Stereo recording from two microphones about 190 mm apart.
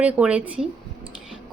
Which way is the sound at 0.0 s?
5° right (ahead or behind).